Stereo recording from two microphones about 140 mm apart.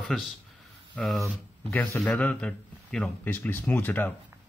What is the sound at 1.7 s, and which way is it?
Speech, 15° left (ahead or behind).